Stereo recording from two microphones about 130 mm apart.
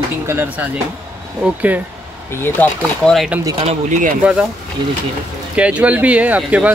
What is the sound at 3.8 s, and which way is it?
Speech, 85° right.